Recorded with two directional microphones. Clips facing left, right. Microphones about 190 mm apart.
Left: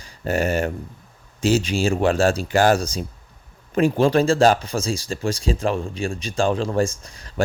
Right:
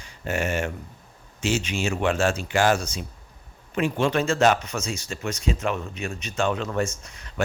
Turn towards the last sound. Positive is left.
turn(degrees=35)  # may be behind; listen again after turning